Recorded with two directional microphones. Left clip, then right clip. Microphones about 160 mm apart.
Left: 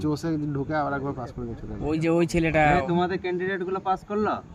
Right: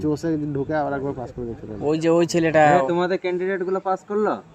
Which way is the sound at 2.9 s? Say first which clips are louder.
Right 4 dB; 30° left (ahead or behind).